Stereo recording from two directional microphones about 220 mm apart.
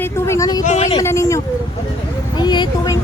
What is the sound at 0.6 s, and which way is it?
Speech, 30° left (ahead or behind).